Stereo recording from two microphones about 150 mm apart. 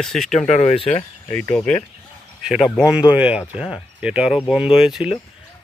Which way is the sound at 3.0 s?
10° right (ahead or behind).